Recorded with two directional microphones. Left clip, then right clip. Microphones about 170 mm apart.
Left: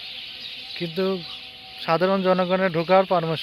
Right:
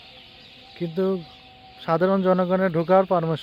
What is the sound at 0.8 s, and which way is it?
Speech, 15° right (ahead or behind).